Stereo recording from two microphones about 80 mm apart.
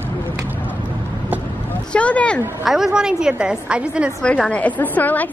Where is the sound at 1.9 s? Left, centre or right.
Centre.